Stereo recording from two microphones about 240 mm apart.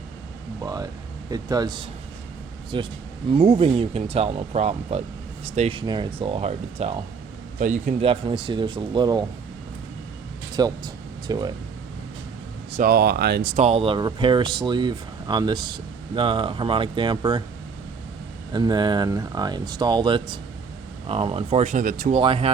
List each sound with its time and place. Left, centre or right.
0.6 s speech: centre
10.5 s speech: centre
12.7 s speech: right
13.7 s speech: right
18.5 s speech: centre; by 22.1 s right
22.1 s speech: right